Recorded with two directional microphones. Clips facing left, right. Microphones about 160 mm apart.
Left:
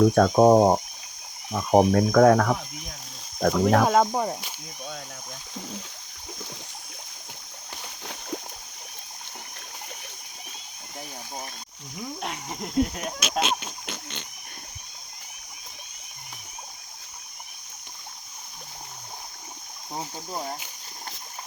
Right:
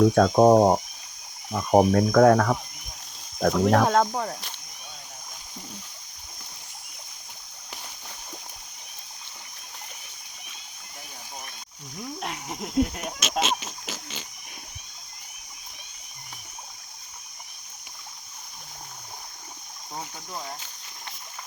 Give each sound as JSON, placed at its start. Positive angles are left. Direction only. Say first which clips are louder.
{"t": 0.0, "sound": "speech", "louder": "even", "side_deg": 0}
{"t": 4.1, "sound": "speech", "louder": "left 3 dB", "side_deg": 15}
{"t": 12.2, "sound": "a sound", "louder": "right 1 dB", "side_deg": 0}
{"t": 19.9, "sound": "speech", "louder": "left 3 dB", "side_deg": 30}